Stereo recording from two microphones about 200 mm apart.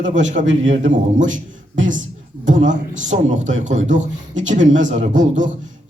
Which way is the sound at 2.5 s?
40° right (ahead or behind).